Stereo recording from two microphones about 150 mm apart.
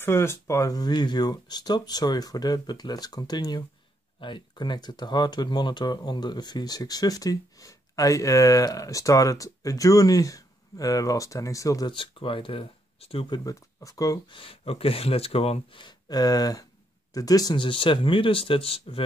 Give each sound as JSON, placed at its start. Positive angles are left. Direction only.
{"t": 0.0, "sound": "speech", "side_deg": 15}
{"t": 11.9, "sound": "speech", "side_deg": 35}
{"t": 13.4, "sound": "speech", "side_deg": 20}
{"t": 14.4, "sound": "speech", "side_deg": 40}